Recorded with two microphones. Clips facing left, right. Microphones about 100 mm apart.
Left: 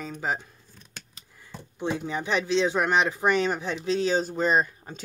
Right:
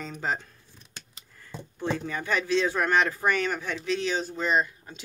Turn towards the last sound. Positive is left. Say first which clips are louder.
# left 2 dB
turn(degrees=35)  # may be behind; listen again after turning